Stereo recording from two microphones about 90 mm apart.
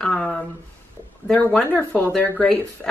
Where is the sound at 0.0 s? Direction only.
10° left (ahead or behind).